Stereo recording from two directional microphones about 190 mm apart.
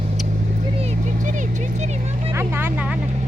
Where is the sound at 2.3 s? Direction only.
10° right (ahead or behind).